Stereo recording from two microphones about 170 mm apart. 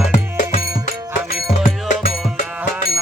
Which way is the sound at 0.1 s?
50° left (ahead or behind).